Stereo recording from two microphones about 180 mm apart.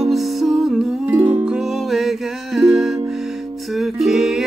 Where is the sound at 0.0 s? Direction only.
Centre (ahead or behind).